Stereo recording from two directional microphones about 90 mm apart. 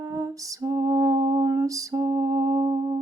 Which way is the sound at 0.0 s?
40° right (ahead or behind).